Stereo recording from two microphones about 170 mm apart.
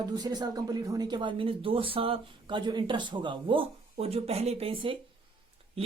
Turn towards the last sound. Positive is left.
turn(degrees=-35)  # may be behind; listen again after turning